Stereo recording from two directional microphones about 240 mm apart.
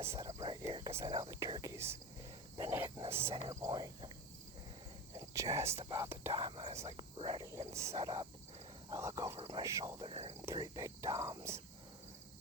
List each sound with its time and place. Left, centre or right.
0.0 s speech: centre
5.1 s cricket: centre
5.7 s speech: centre